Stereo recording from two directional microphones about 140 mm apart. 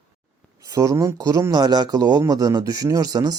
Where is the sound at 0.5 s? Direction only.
30° right (ahead or behind).